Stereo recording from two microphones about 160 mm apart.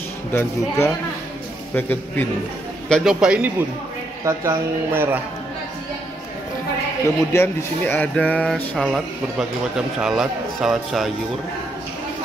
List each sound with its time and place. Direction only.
0.3 s speech: 15° left (ahead or behind)
2.9 s speech: centre (ahead or behind)
4.2 s speech: 20° right (ahead or behind)
7.3 s speech: 15° left (ahead or behind)